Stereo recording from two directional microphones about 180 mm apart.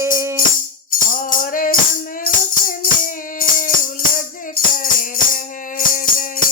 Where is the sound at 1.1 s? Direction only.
50° left (ahead or behind).